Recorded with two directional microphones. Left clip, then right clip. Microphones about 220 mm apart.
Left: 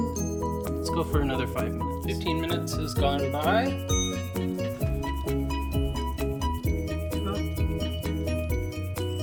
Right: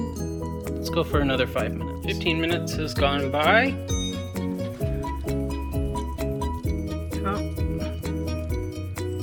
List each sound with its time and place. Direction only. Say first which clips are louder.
0.9 s speech: right 5 dB; 10° right (ahead or behind)
3.3 s speech: right 8 dB; 25° right (ahead or behind)